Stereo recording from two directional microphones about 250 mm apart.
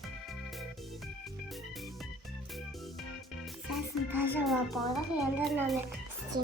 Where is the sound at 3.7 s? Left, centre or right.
Centre.